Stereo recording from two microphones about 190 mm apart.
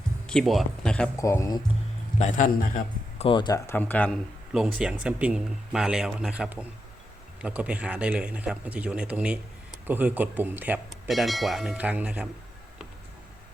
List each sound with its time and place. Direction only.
0.3 s speech: centre (ahead or behind)
1.1 s speech: 15° left (ahead or behind)
2.1 s a man's voice: 40° left (ahead or behind)
3.2 s speech: 25° left (ahead or behind); by 12.3 s 5° right (ahead or behind)